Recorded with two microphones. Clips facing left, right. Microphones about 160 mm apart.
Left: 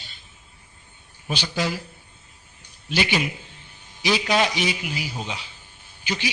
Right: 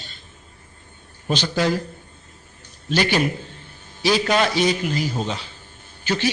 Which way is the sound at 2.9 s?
45° right (ahead or behind).